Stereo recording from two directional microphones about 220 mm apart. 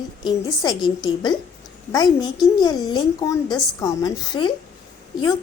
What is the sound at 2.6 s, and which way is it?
A woman's voice, 15° left (ahead or behind).